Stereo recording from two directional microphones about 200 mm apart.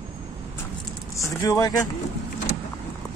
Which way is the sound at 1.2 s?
15° left (ahead or behind).